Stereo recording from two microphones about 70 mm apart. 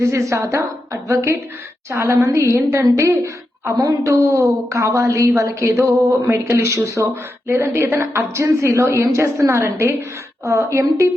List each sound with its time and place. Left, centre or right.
0.0 s a woman's voice: right
1.9 s a woman's voice: right
8.1 s a woman's voice: right